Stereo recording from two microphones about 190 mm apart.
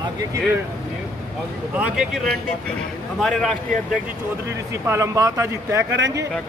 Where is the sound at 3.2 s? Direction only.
Centre (ahead or behind).